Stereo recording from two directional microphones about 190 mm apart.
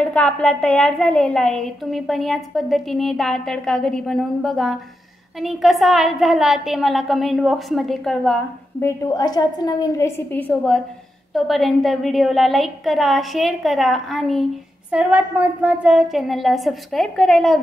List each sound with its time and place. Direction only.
0.0 s a woman's voice: 5° left (ahead or behind)
8.8 s a woman's voice: 15° left (ahead or behind); by 17.6 s centre (ahead or behind)